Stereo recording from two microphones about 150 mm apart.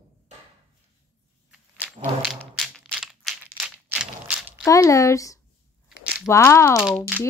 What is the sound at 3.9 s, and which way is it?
Mechanisms, 5° right (ahead or behind).